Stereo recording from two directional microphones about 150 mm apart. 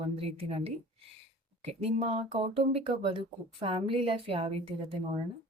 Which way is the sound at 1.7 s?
45° right (ahead or behind).